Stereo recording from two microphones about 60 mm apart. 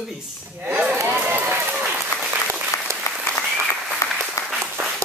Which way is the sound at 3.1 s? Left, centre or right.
Left.